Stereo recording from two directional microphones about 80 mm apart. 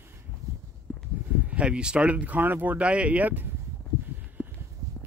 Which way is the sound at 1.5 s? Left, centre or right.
Centre.